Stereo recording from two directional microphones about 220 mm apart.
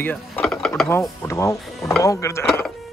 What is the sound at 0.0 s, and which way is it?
Speech, 5° left (ahead or behind).